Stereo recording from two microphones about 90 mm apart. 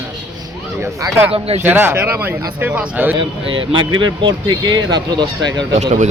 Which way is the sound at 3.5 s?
65° right (ahead or behind).